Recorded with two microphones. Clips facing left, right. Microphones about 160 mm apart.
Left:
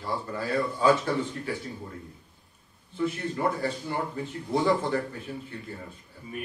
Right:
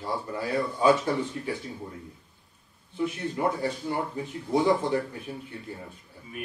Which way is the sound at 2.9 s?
15° right (ahead or behind).